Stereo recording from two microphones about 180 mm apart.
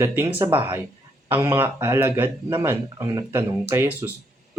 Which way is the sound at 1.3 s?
10° right (ahead or behind).